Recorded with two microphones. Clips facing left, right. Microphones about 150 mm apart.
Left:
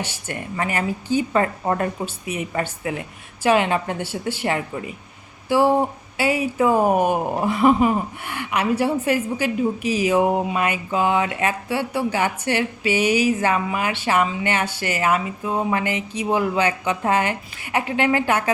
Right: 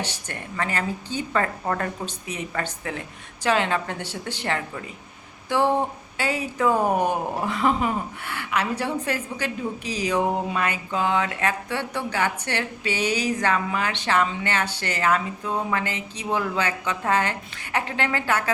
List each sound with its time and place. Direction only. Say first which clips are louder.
0.0 s speech: left 3 dB; 15° left (ahead or behind)